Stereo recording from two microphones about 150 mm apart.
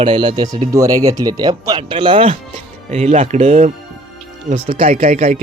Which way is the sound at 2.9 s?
45° right (ahead or behind).